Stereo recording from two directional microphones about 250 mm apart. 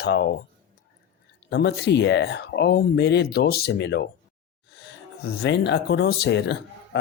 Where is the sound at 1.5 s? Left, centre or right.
Left.